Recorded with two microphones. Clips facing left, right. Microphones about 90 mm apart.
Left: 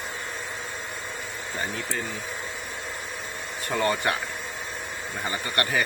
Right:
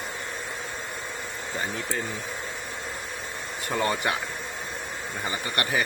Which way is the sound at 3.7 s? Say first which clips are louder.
Left 1 dB; 5° right (ahead or behind).